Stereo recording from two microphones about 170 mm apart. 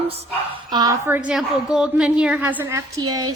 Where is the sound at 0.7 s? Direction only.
20° right (ahead or behind).